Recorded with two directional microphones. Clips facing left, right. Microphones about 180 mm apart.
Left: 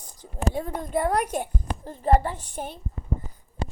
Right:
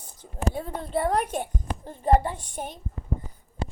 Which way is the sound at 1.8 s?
15° right (ahead or behind).